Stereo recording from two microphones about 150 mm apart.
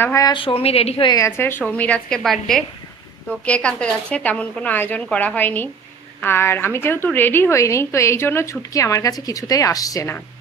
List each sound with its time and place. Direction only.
0.0 s a woman's voice: 20° left (ahead or behind)
0.3 s a woman's voice: 35° left (ahead or behind)
1.1 s a woman's voice: 15° left (ahead or behind)